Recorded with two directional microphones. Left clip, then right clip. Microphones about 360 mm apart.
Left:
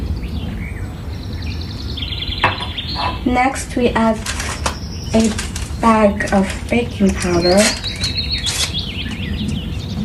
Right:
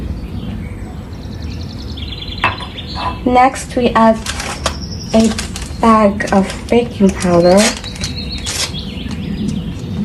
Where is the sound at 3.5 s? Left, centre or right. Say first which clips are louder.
Right 2 dB; centre.